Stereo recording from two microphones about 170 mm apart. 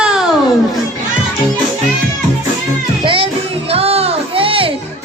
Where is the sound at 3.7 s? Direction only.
35° right (ahead or behind).